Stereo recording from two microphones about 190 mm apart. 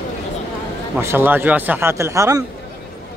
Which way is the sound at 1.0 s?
10° right (ahead or behind).